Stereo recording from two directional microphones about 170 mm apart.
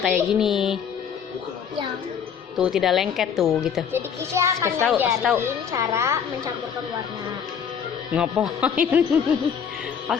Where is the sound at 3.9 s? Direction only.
15° right (ahead or behind).